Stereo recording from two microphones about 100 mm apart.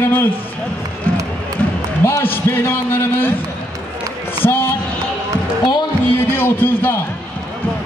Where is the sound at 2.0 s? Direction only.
25° left (ahead or behind).